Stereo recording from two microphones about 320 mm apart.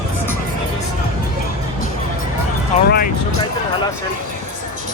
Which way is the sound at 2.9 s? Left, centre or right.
Left.